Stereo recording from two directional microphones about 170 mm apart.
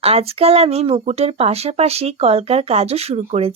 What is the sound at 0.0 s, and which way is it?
Speech, 35° right (ahead or behind).